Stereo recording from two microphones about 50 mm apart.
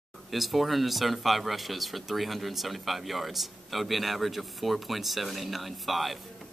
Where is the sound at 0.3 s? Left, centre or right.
Centre.